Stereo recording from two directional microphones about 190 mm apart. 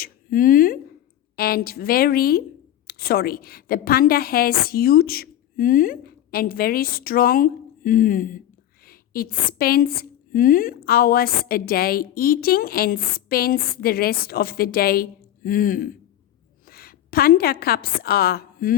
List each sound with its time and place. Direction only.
0.0 s a woman's voice: 50° left (ahead or behind)